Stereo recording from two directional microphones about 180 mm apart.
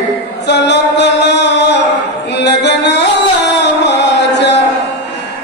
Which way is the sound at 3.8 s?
70° left (ahead or behind).